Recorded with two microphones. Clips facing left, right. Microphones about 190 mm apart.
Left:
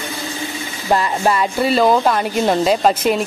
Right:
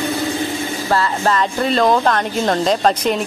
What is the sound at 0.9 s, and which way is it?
Speech, 15° left (ahead or behind).